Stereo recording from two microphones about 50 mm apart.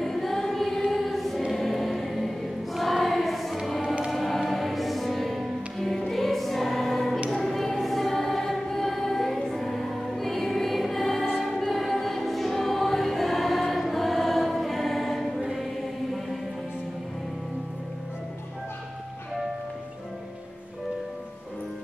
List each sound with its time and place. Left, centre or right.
0.0 s choir: centre
4.1 s music: centre
7.2 s choir: centre
11.3 s music: centre
11.6 s choir: centre